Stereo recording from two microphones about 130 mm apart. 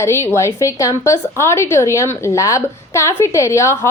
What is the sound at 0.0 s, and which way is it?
A woman's voice, 20° left (ahead or behind).